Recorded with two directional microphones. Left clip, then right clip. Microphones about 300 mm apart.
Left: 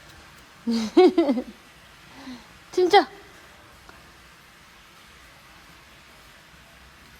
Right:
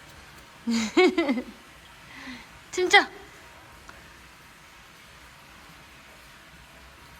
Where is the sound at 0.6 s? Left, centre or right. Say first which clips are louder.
Left 4 dB; centre.